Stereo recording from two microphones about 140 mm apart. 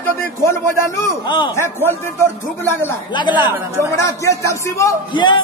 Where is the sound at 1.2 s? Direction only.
35° left (ahead or behind).